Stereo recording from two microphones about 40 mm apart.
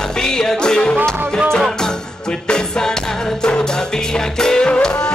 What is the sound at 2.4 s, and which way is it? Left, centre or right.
Music, centre.